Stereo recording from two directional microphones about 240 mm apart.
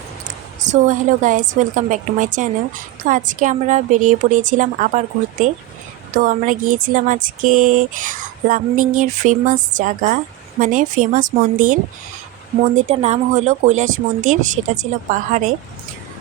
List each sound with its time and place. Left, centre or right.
0.6 s speech: right